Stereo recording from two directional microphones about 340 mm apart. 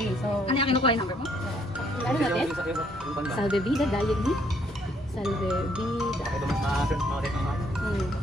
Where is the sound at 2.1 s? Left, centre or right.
Centre.